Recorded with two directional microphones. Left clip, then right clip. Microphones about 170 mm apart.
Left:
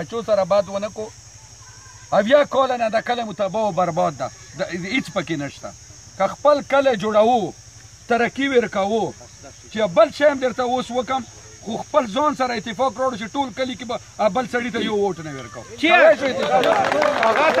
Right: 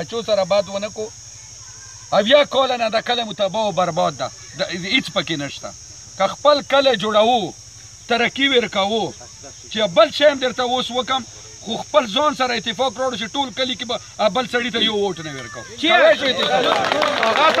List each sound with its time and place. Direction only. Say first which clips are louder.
0.0 s speech: even; centre (ahead or behind)
15.8 s speech: even; 45° left (ahead or behind)
16.4 s speech: left 2 dB; 60° right (ahead or behind)